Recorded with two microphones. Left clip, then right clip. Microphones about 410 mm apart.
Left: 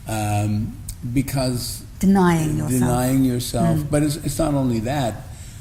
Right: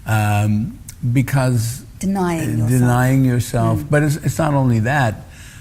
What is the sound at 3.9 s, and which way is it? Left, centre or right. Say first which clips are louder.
Mantra: right 3 dB; right.